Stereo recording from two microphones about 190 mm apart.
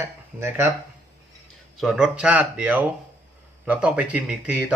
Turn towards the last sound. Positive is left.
turn(degrees=-10)  # may be behind; listen again after turning